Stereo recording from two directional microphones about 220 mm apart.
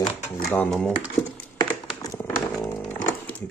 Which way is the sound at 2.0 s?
15° left (ahead or behind).